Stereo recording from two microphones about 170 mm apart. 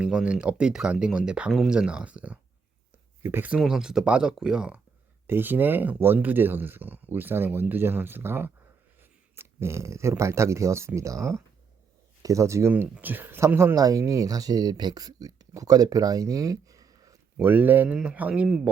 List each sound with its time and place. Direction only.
0.0 s speech: 5° right (ahead or behind)
12.2 s speech: 20° right (ahead or behind)